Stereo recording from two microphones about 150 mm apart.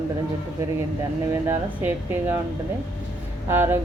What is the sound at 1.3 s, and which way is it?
Speech, 15° right (ahead or behind).